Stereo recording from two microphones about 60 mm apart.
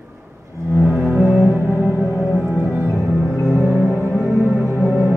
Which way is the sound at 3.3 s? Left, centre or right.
Left.